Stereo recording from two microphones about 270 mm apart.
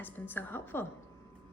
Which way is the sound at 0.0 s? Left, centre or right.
Centre.